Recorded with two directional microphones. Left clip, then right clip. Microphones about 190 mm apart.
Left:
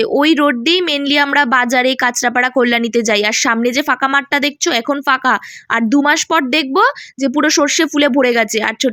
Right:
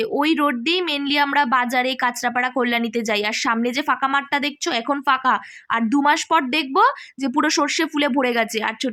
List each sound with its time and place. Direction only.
0.0 s speech: 25° left (ahead or behind)